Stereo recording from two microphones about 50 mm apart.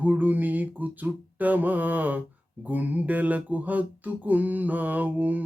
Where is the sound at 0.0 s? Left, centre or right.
Right.